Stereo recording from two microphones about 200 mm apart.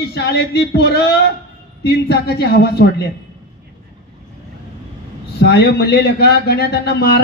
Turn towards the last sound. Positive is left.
turn(degrees=55)  # may be behind; listen again after turning